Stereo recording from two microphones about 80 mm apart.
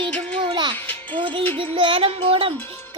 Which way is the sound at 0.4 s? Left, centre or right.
Right.